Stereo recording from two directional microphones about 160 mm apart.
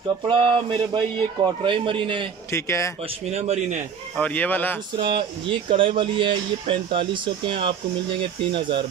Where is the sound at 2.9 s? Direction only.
40° right (ahead or behind).